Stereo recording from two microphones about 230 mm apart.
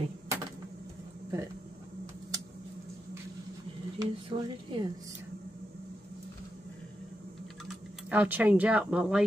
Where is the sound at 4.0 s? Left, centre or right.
Right.